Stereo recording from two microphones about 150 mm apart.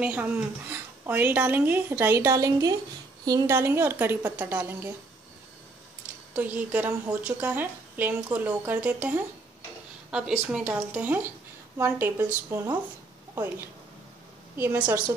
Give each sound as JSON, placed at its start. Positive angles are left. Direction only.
{"t": 0.0, "sound": "a woman's voice", "side_deg": -10}
{"t": 6.3, "sound": "a woman's voice", "side_deg": -10}